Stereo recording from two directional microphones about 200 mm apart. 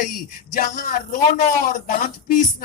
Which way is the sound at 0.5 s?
45° left (ahead or behind).